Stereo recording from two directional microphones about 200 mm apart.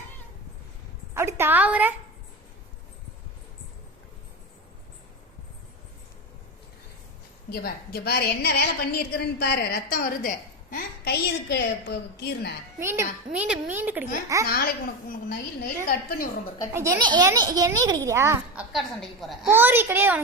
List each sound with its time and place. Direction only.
1.1 s a sound: 10° right (ahead or behind)
7.5 s a woman's voice: 50° left (ahead or behind)
12.8 s a child's voice: 10° right (ahead or behind)
14.4 s a woman's voice: 50° left (ahead or behind)
15.9 s a woman's voice: 45° left (ahead or behind)
16.7 s a child's voice: 15° right (ahead or behind)
18.7 s a woman's voice: centre (ahead or behind)
19.5 s a child's voice: 10° right (ahead or behind)